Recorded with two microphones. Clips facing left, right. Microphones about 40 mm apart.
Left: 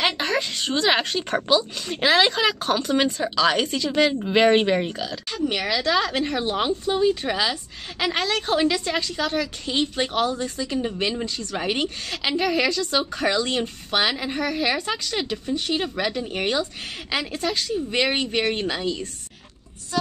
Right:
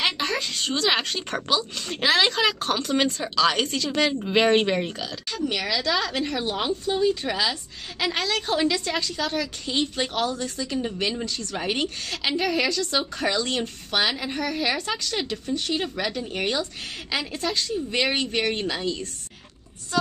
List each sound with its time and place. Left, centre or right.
0.0 s a woman's voice: centre
5.3 s a woman's voice: left